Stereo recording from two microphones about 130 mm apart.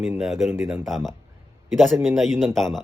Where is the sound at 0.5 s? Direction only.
20° right (ahead or behind).